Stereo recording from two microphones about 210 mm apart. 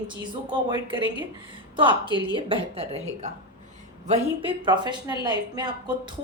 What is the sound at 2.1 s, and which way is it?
A woman's voice, 25° right (ahead or behind).